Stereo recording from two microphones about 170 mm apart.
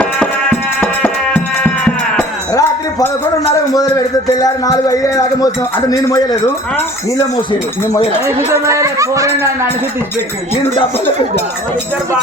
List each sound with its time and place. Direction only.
0.8 s music: 10° left (ahead or behind)
2.5 s a sound: 20° left (ahead or behind)
3.7 s a man's voice: 20° left (ahead or behind)
8.5 s speech: 15° right (ahead or behind)